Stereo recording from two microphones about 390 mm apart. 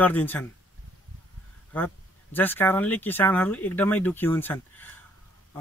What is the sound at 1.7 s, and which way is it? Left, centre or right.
Speech, centre.